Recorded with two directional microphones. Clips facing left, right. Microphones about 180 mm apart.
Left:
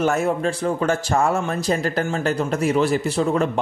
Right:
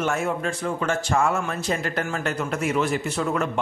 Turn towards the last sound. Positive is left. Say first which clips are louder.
# left 5 dB
turn(degrees=30)  # may be behind; listen again after turning